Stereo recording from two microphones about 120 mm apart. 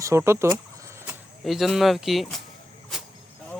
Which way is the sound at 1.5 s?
Centre (ahead or behind).